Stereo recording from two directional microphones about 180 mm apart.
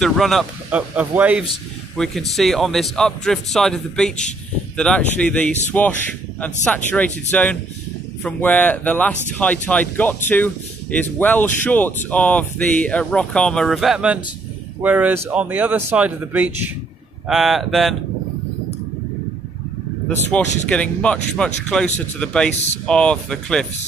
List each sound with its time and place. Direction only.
0.0 s speech: centre (ahead or behind)
20.2 s speech: 5° left (ahead or behind)